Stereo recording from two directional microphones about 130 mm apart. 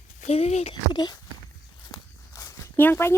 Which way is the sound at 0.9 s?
35° left (ahead or behind).